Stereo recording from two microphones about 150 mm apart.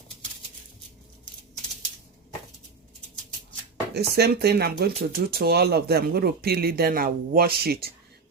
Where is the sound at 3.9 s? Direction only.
90° right.